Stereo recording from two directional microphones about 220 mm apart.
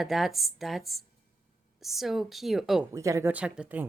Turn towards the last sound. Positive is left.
turn(degrees=-5)  # may be behind; listen again after turning